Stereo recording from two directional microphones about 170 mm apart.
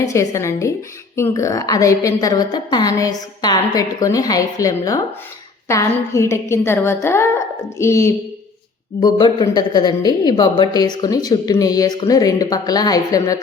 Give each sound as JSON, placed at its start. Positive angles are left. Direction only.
{"t": 0.0, "sound": "a woman's voice", "side_deg": 20}